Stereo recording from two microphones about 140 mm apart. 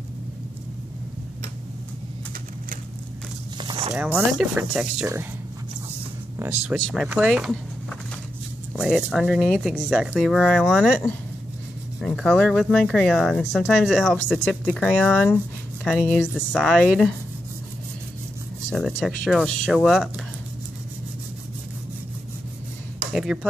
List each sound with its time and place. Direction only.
3.5 s a sound: 35° right (ahead or behind)
3.9 s speech: 10° right (ahead or behind)
6.7 s speech: 5° right (ahead or behind)
10.1 s speech: 5° left (ahead or behind)
12.0 s speech: 5° left (ahead or behind)
18.7 s speech: centre (ahead or behind)
23.1 s speech: 5° right (ahead or behind)